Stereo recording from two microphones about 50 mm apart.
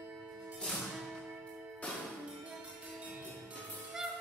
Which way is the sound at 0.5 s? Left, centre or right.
Centre.